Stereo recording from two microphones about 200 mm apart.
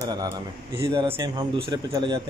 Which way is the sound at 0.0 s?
20° right (ahead or behind).